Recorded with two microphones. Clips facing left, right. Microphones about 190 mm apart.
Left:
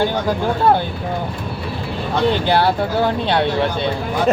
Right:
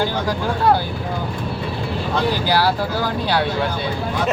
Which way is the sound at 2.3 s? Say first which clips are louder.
Left 2 dB; 25° left (ahead or behind).